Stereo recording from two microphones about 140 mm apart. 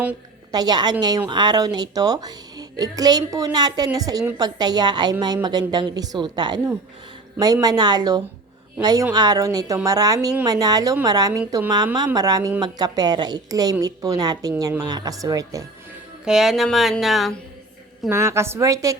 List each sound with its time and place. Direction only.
0.5 s a woman's voice: 30° right (ahead or behind)
16.2 s speech: 5° right (ahead or behind)
18.1 s speech: 20° right (ahead or behind)